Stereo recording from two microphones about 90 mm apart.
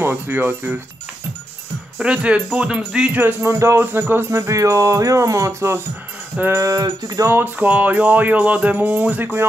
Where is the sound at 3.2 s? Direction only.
30° right (ahead or behind).